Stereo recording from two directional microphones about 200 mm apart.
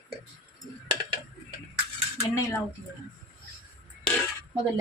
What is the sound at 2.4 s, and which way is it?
Speech, 15° left (ahead or behind).